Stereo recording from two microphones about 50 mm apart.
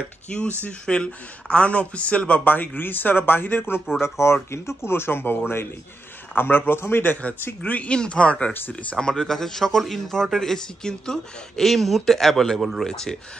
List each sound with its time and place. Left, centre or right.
0.3 s speech: left
4.0 s a man's voice: left
7.6 s speech: left
7.9 s speech: centre